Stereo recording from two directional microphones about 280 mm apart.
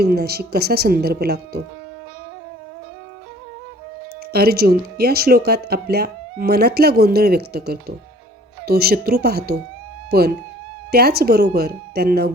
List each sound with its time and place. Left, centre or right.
0.0 s speech: right
4.3 s speech: right